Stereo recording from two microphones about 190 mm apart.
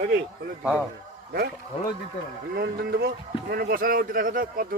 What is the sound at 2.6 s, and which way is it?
Speech, 55° right (ahead or behind).